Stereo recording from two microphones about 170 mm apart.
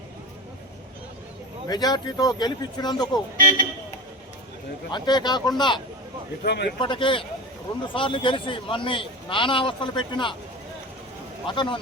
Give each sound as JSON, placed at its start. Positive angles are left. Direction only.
{"t": 1.6, "sound": "speech", "side_deg": 25}
{"t": 3.3, "sound": "speech", "side_deg": -55}
{"t": 4.9, "sound": "speech", "side_deg": 25}
{"t": 6.4, "sound": "speech", "side_deg": 80}
{"t": 6.7, "sound": "a man's voice", "side_deg": 30}
{"t": 11.4, "sound": "speech", "side_deg": 30}